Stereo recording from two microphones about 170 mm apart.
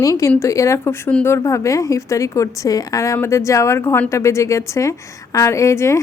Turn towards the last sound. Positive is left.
turn(degrees=15)  # may be behind; listen again after turning